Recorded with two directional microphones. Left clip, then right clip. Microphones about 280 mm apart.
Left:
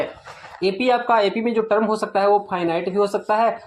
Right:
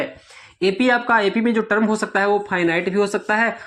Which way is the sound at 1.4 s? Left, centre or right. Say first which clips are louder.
Even; right.